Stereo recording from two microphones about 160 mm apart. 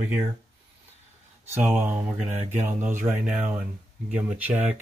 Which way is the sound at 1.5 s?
15° right (ahead or behind).